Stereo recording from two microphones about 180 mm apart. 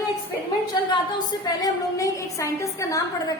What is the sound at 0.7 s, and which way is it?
A woman's voice, 25° left (ahead or behind).